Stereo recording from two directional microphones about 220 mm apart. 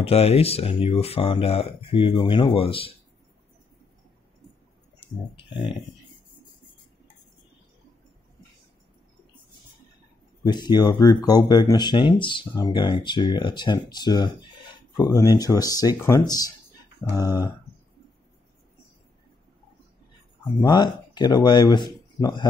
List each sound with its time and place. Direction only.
0.0 s speech: 25° left (ahead or behind)
5.0 s speech: 25° left (ahead or behind)
10.4 s speech: 20° left (ahead or behind)
20.6 s speech: 20° left (ahead or behind)